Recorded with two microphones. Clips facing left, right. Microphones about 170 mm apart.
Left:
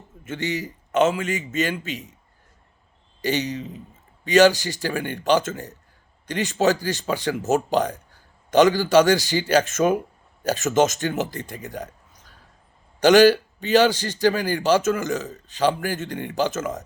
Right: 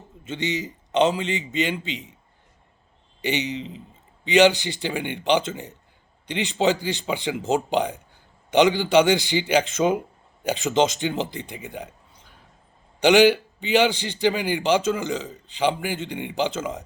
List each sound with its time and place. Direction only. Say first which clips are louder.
0.3 s a man's voice: even; 20° right (ahead or behind)
3.2 s a man's voice: left 2 dB; 20° right (ahead or behind)
13.0 s a man's voice: left 2 dB; 15° right (ahead or behind)